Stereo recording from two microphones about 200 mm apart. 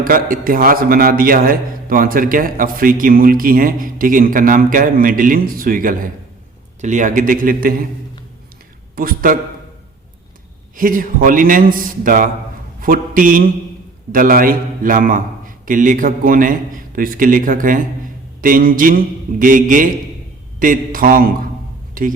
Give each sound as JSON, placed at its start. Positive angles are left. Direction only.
{"t": 0.0, "sound": "a man's voice", "side_deg": -45}
{"t": 9.0, "sound": "a man's voice", "side_deg": -45}
{"t": 10.8, "sound": "a man's voice", "side_deg": -45}